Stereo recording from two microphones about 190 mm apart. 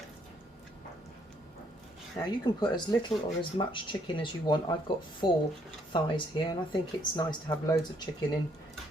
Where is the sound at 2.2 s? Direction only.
20° left (ahead or behind).